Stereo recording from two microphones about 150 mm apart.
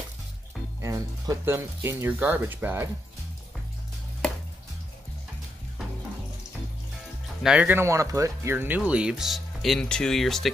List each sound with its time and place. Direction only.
0.7 s speech: 20° right (ahead or behind)
7.4 s speech: 10° right (ahead or behind)